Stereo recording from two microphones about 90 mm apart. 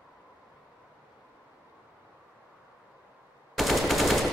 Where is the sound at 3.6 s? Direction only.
Centre (ahead or behind).